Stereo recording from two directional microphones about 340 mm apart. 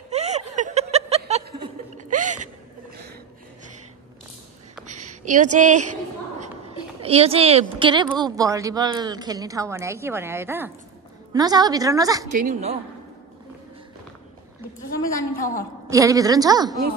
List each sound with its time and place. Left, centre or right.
0.1 s snicker: centre
4.8 s a sound: right
7.0 s a woman's voice: centre
12.3 s a woman's voice: right
15.3 s a woman's voice: left
15.9 s a woman's voice: centre